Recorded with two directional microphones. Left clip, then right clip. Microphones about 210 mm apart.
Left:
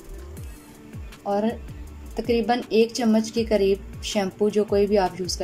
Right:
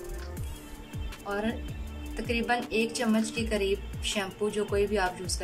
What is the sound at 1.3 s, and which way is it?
A woman's voice, 30° left (ahead or behind).